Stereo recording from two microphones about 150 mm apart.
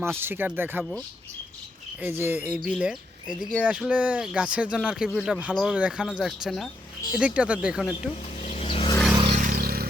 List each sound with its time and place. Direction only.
0.2 s speech: 15° right (ahead or behind)
2.0 s speech: 15° right (ahead or behind)
8.4 s a sound: 40° left (ahead or behind)
9.3 s vehicle: 60° right (ahead or behind); by 9.9 s 80° right